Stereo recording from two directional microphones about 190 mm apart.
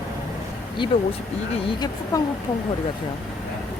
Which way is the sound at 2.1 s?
20° left (ahead or behind).